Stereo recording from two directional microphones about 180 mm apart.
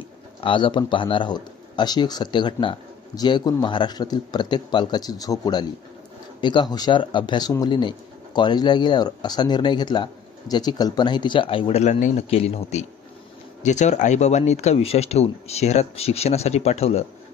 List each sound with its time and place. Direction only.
0.4 s speech: 25° left (ahead or behind)